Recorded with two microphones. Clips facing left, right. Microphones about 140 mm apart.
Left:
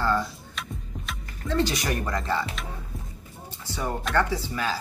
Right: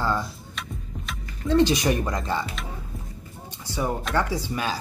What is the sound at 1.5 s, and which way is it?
Speech, 20° right (ahead or behind).